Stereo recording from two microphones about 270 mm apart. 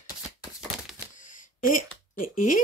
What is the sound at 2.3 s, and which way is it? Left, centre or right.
Speech, left.